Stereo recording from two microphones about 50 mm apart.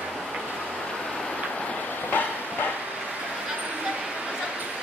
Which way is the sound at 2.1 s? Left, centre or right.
Left.